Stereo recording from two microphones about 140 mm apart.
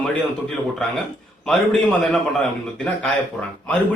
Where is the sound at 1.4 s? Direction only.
5° left (ahead or behind).